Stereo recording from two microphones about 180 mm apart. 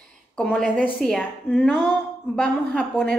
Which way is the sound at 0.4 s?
5° left (ahead or behind).